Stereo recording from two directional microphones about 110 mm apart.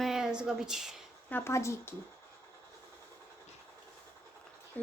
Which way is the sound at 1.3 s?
25° left (ahead or behind).